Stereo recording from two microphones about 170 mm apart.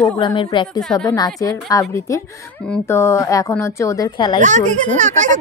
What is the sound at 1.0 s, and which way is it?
A woman's voice, 20° left (ahead or behind).